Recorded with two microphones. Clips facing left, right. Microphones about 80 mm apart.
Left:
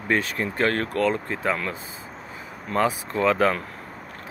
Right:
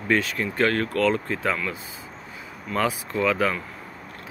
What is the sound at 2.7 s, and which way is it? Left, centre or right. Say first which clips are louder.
Speech: left 2 dB; left.